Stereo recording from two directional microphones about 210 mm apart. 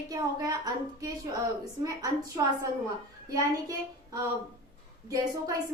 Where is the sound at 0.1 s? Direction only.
15° right (ahead or behind).